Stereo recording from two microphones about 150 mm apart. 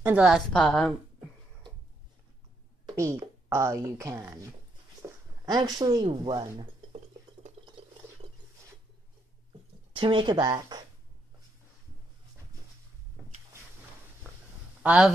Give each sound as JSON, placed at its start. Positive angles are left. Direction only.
{"t": 0.0, "sound": "a woman's voice", "side_deg": -5}
{"t": 3.0, "sound": "speech", "side_deg": -20}
{"t": 5.0, "sound": "a sound", "side_deg": -15}
{"t": 5.4, "sound": "speech", "side_deg": -25}
{"t": 9.9, "sound": "speech", "side_deg": -35}
{"t": 14.8, "sound": "speech", "side_deg": -10}